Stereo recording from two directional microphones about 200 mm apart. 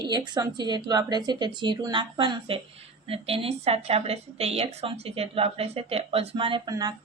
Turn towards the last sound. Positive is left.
turn(degrees=-20)  # may be behind; listen again after turning